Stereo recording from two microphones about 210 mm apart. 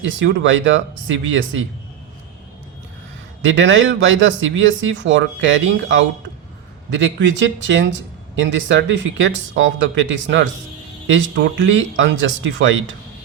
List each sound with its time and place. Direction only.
0.0 s speech: 60° right (ahead or behind)
3.4 s speech: 60° right (ahead or behind)